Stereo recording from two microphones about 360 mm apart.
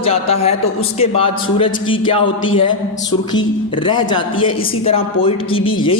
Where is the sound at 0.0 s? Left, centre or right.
Centre.